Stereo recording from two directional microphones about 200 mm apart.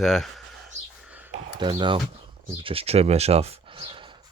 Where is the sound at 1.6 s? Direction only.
25° right (ahead or behind).